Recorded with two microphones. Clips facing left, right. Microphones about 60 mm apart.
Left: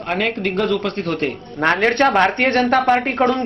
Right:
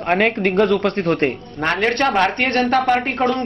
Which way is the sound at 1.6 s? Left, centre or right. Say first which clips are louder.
Left 3 dB; left.